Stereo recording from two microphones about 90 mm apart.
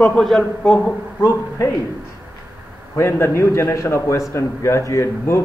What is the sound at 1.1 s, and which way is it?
Speech, 25° left (ahead or behind).